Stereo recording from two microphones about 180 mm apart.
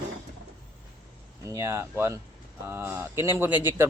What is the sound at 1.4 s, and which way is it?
Speech, 15° right (ahead or behind).